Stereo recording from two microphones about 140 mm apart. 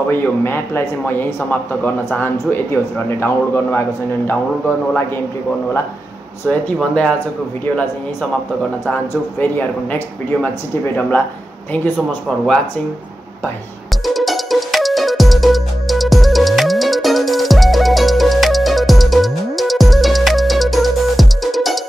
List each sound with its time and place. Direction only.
0.1 s speech: 15° left (ahead or behind)
9.4 s speech: 10° left (ahead or behind)
14.0 s music: centre (ahead or behind)